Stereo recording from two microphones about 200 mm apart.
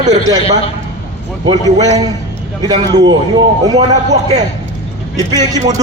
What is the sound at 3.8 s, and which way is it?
Speech, 35° right (ahead or behind).